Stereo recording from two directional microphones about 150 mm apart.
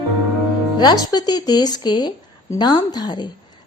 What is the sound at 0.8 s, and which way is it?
A woman's voice, 30° left (ahead or behind).